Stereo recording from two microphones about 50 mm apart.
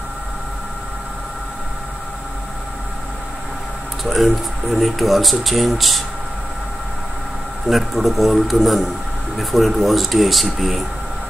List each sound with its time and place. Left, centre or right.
4.0 s speech: centre
7.7 s speech: centre